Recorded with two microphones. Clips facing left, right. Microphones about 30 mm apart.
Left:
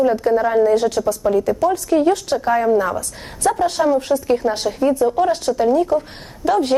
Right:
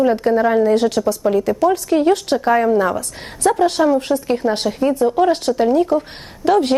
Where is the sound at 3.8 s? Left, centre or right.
Centre.